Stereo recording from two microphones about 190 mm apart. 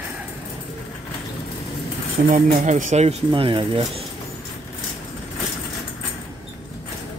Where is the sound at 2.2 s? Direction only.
45° right (ahead or behind).